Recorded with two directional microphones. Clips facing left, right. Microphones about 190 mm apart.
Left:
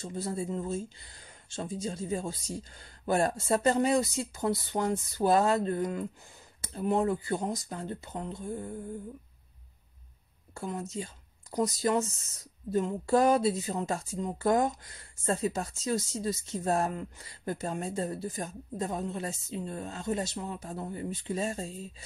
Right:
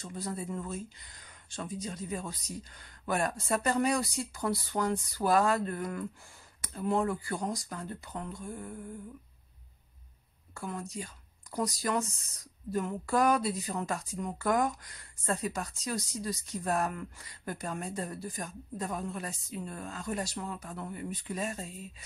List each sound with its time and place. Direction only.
0.0 s speech: 25° left (ahead or behind)
10.5 s speech: 25° left (ahead or behind)